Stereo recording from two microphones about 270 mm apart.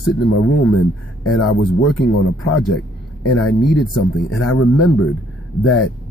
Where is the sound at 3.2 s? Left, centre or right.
Left.